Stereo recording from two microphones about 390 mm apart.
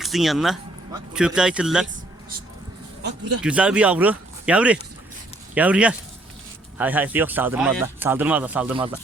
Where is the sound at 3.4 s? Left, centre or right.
Centre.